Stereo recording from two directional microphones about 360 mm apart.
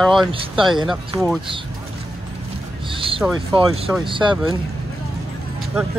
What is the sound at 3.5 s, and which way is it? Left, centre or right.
Speech, centre.